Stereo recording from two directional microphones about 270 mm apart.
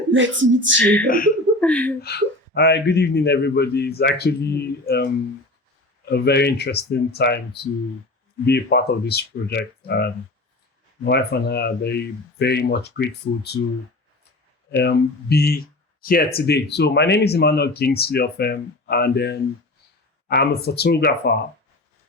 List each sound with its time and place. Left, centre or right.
0.1 s speech: right
1.0 s speech: left
1.6 s speech: centre
2.0 s speech: left
14.8 s speech: left